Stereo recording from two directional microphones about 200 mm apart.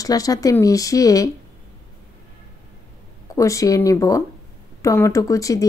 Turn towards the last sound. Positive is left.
turn(degrees=15)  # may be behind; listen again after turning